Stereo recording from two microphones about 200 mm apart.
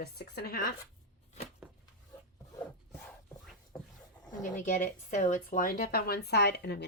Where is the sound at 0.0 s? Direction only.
50° left (ahead or behind).